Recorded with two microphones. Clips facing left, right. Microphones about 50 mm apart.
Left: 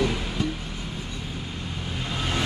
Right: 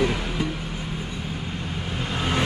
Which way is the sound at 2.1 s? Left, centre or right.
Right.